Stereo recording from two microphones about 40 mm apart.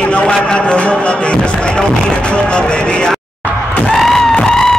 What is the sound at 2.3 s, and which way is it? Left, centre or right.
Speech, left.